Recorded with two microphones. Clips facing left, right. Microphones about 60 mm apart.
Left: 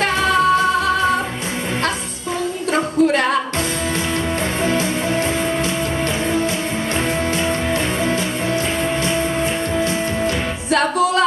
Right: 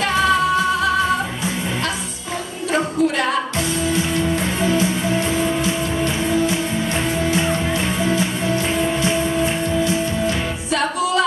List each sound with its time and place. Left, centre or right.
2.7 s music: left
9.8 s music: left